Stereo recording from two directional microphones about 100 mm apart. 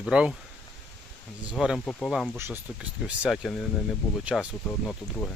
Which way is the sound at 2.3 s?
25° right (ahead or behind).